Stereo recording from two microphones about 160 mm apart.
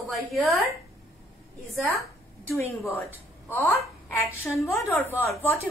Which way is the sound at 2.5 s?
15° left (ahead or behind).